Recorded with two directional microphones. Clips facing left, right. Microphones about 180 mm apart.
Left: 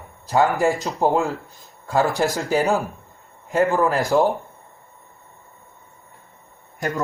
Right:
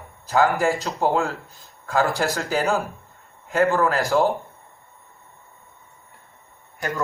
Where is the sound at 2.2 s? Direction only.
15° left (ahead or behind).